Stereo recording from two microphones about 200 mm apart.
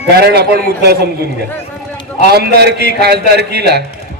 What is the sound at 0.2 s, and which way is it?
Speech, 50° right (ahead or behind).